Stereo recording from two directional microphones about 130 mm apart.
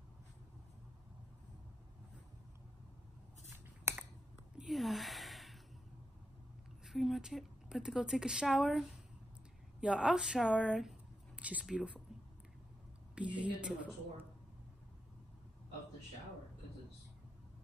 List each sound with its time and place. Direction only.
3.4 s scissors: 20° right (ahead or behind)
4.6 s a sound: centre (ahead or behind)
6.9 s a woman's voice: centre (ahead or behind)
13.1 s a woman's voice: 10° right (ahead or behind)